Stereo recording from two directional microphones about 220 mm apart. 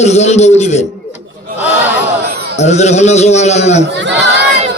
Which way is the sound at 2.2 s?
45° right (ahead or behind).